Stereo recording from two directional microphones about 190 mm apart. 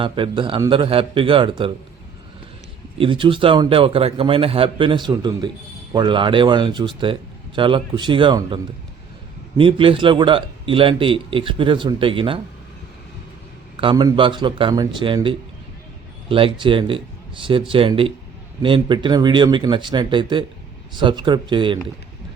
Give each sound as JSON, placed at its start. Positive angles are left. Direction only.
{"t": 0.0, "sound": "speech", "side_deg": -25}
{"t": 3.0, "sound": "speech", "side_deg": -25}
{"t": 13.7, "sound": "speech", "side_deg": -25}